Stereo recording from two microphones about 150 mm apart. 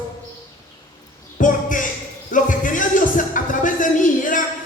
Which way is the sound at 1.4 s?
60° left (ahead or behind).